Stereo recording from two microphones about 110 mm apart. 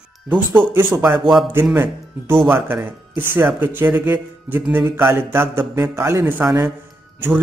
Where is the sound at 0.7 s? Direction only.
20° right (ahead or behind).